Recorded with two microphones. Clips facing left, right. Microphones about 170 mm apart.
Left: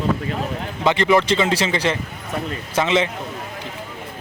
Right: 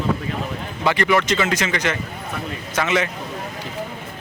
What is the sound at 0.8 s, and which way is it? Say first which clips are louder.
A man's voice: left 2 dB; 25° left (ahead or behind).